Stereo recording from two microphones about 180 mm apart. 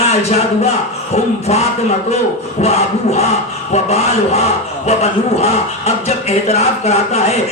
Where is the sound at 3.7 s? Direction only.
35° left (ahead or behind).